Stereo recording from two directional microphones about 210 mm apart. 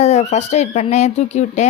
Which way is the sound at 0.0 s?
35° left (ahead or behind).